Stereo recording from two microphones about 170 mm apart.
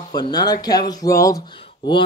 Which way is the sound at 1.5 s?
30° left (ahead or behind).